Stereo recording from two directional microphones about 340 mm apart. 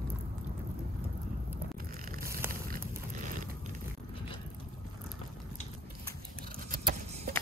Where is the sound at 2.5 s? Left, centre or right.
Right.